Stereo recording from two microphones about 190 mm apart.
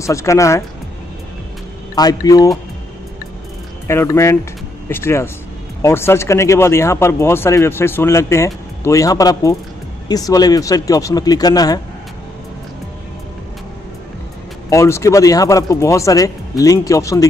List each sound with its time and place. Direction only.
0.0 s speech: 15° left (ahead or behind)
2.0 s speech: 20° left (ahead or behind)
3.8 s speech: 15° left (ahead or behind)
14.7 s speech: 15° left (ahead or behind)